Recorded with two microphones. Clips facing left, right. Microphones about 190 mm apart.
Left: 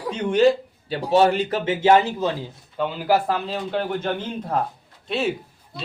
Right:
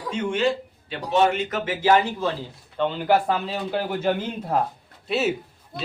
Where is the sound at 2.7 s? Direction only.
5° left (ahead or behind).